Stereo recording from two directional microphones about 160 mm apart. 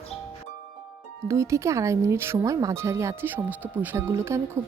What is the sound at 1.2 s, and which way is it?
Speech, 20° right (ahead or behind).